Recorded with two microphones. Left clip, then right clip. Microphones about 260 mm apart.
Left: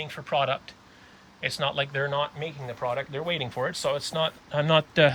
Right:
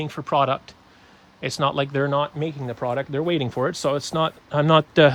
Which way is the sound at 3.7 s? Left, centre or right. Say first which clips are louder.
Right 4 dB; right.